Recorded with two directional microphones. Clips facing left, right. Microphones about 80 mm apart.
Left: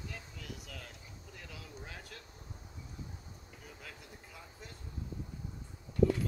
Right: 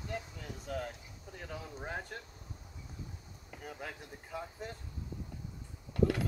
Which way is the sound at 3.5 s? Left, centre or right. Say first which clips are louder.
Right 9 dB; right.